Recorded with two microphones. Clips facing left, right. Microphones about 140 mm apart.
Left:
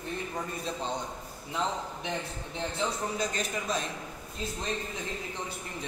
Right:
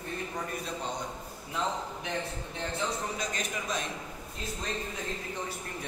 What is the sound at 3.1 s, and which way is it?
Speech, 35° left (ahead or behind).